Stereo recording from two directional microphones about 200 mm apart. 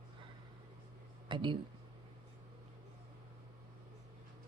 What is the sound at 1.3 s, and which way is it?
Speech, 25° right (ahead or behind).